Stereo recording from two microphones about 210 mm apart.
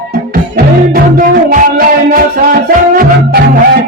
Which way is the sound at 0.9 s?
40° right (ahead or behind).